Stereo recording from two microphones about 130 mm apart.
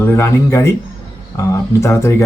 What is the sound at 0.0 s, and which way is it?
Speech, 20° left (ahead or behind).